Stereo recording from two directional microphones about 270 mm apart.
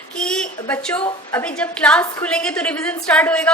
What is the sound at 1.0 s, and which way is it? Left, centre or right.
Speech, centre.